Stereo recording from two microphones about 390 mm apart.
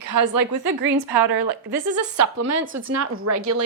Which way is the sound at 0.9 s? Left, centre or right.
Right.